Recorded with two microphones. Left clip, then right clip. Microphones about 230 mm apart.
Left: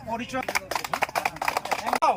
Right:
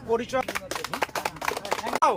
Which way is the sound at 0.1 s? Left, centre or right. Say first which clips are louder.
Right 2 dB; centre.